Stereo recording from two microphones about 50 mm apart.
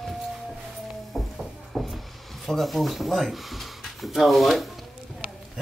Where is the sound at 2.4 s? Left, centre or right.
Centre.